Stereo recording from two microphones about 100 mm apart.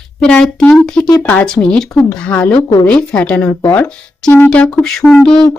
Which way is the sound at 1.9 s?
20° left (ahead or behind).